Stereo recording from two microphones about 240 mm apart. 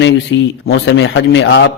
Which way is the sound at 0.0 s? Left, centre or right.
Left.